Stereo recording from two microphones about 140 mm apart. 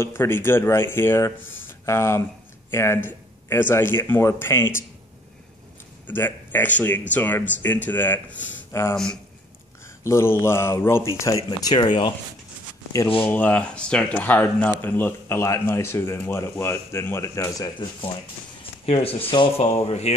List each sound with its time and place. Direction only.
0.0 s speech: 15° left (ahead or behind)
6.0 s speech: 15° left (ahead or behind)
10.0 s speech: 20° left (ahead or behind)
13.2 s speech: 10° left (ahead or behind)
18.9 s speech: 40° left (ahead or behind)